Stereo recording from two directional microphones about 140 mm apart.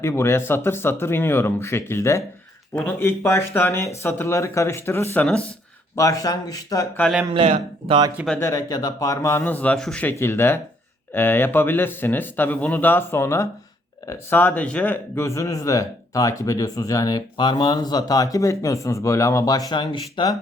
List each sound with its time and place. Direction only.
0.0 s speech: 20° left (ahead or behind)
5.2 s speech: 5° left (ahead or behind)
6.0 s speech: 25° left (ahead or behind)
7.3 s speech: 45° right (ahead or behind)
8.4 s speech: 25° left (ahead or behind)